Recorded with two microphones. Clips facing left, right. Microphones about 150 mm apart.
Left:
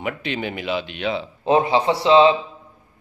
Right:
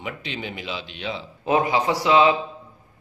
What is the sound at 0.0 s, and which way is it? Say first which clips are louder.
Speech: left 6 dB; 60° left (ahead or behind).